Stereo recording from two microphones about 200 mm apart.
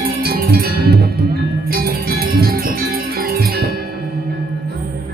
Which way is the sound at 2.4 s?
50° right (ahead or behind).